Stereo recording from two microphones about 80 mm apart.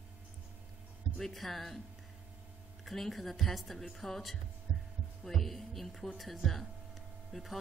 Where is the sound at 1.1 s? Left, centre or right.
Centre.